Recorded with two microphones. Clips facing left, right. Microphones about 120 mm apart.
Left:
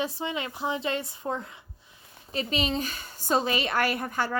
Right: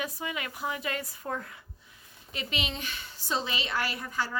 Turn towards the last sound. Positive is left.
turn(degrees=55)  # may be behind; listen again after turning